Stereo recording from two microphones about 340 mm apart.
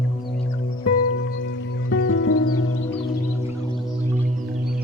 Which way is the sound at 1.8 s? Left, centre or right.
Left.